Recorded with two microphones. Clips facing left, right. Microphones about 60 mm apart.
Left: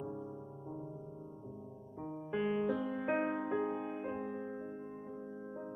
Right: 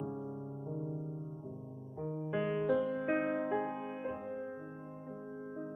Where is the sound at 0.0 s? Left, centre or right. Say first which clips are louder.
Right 2 dB; centre.